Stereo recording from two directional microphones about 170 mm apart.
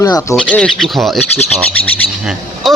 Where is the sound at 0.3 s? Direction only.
5° left (ahead or behind).